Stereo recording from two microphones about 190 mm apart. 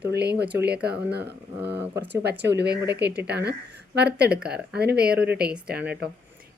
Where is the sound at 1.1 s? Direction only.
60° right (ahead or behind).